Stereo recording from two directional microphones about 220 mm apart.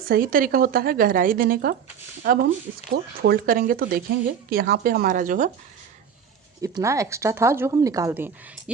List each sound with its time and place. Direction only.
0.0 s speech: 40° right (ahead or behind)
6.6 s speech: 15° right (ahead or behind)